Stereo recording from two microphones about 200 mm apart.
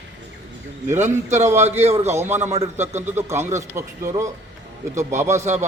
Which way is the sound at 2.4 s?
35° right (ahead or behind).